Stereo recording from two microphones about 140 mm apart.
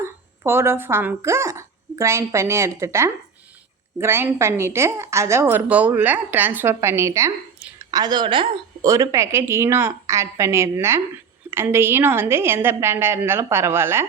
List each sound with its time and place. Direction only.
0.0 s a woman's voice: 15° right (ahead or behind); by 8.4 s 35° right (ahead or behind)
8.8 s a woman's voice: 25° right (ahead or behind)